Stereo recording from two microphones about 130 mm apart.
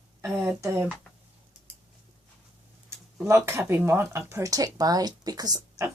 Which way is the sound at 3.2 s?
20° right (ahead or behind).